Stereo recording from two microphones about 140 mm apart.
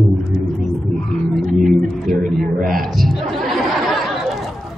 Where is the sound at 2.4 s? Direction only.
90° right.